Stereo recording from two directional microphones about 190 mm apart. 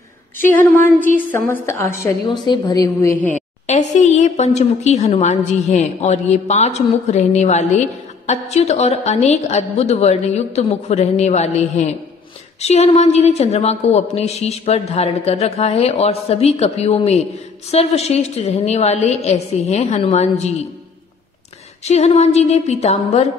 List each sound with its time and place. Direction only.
0.4 s a woman's voice: 10° left (ahead or behind)
2.2 s a woman's voice: 25° left (ahead or behind)
3.3 s a woman's voice: 35° left (ahead or behind)
21.8 s a woman's voice: 35° left (ahead or behind)